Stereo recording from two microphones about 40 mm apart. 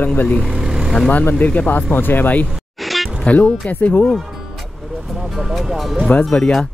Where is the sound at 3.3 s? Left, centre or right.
Left.